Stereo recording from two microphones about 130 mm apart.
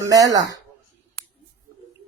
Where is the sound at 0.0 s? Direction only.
30° right (ahead or behind).